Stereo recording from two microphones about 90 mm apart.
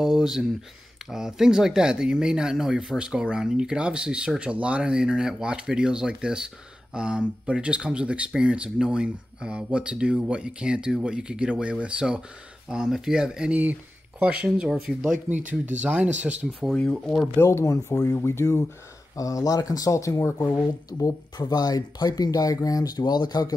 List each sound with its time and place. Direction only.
0.0 s speech: 5° right (ahead or behind)
15.6 s speech: 15° right (ahead or behind)
16.6 s speech: 5° left (ahead or behind)
17.4 s speech: 30° left (ahead or behind); by 23.5 s 50° left (ahead or behind)